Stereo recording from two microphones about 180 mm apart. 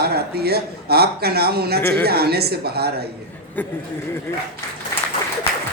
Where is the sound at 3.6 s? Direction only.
10° left (ahead or behind).